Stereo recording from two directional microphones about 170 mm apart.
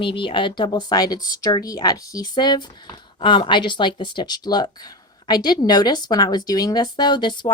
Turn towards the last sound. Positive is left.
turn(degrees=25)  # may be behind; listen again after turning